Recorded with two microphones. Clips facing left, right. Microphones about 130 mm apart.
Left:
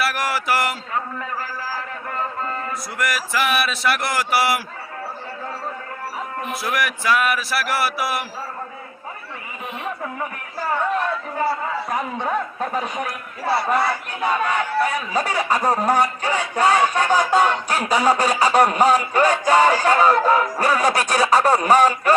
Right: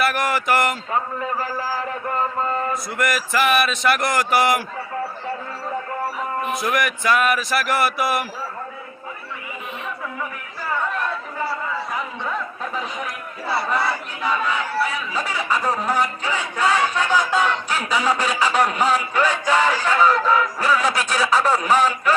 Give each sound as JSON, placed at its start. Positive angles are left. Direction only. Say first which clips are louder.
{"t": 0.0, "sound": "speech", "louder": "right 2 dB", "side_deg": 5}
{"t": 3.0, "sound": "a man's voice", "louder": "right 2 dB", "side_deg": 0}
{"t": 6.6, "sound": "a man's voice", "louder": "left 1 dB", "side_deg": 5}
{"t": 11.9, "sound": "a man's voice", "louder": "left 4 dB", "side_deg": 50}